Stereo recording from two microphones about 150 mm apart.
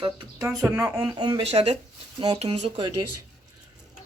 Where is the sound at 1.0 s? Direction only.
30° right (ahead or behind).